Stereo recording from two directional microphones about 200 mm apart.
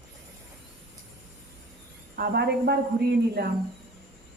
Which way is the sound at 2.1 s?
50° right (ahead or behind).